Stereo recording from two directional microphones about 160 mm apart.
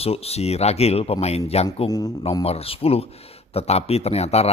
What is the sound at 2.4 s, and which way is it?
Speech, 40° left (ahead or behind).